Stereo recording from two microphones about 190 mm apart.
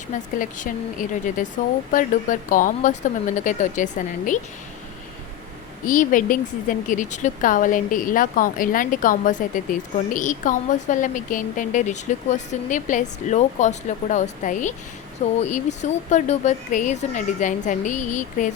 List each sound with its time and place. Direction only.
0.1 s speech: 45° left (ahead or behind)
5.8 s a woman's voice: 45° left (ahead or behind)